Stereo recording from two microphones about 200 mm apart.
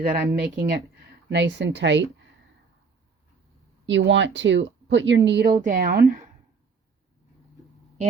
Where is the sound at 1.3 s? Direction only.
60° right (ahead or behind).